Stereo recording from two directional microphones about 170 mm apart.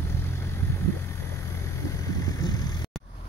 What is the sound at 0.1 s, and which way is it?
Vehicle, 15° left (ahead or behind).